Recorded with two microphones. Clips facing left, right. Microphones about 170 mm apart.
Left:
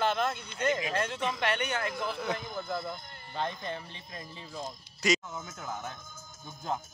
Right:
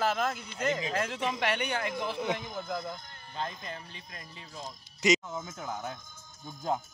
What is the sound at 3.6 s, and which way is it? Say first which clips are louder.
Speech: left 4 dB; 25° left (ahead or behind).